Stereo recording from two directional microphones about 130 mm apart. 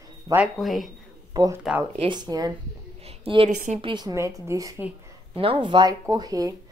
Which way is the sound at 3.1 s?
45° right (ahead or behind).